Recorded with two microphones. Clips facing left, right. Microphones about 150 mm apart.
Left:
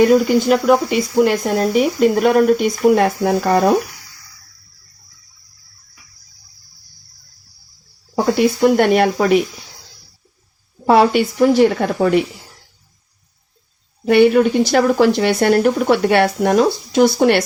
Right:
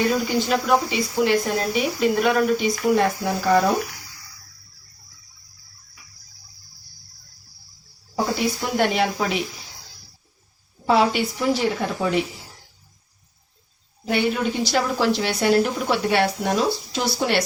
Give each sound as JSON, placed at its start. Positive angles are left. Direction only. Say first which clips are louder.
{"t": 0.0, "sound": "speech", "louder": "left 9 dB", "side_deg": 55}
{"t": 8.6, "sound": "speech", "louder": "left 9 dB", "side_deg": 55}
{"t": 10.8, "sound": "speech", "louder": "left 6 dB", "side_deg": 55}
{"t": 14.1, "sound": "speech", "louder": "left 11 dB", "side_deg": 60}